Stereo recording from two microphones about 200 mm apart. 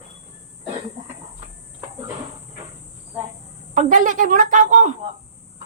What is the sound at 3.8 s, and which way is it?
Speech, 40° right (ahead or behind).